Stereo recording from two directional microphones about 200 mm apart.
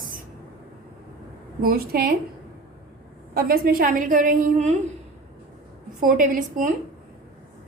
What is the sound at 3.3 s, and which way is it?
A woman's voice, 50° right (ahead or behind).